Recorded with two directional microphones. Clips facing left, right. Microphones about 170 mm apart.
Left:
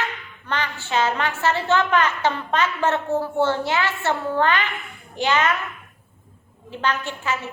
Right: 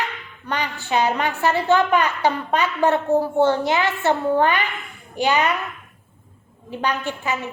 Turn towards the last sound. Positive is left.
turn(degrees=-15)  # may be behind; listen again after turning